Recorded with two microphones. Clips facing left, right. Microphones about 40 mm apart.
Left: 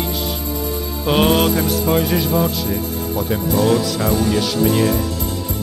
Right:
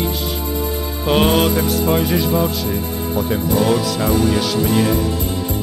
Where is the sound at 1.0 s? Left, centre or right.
Centre.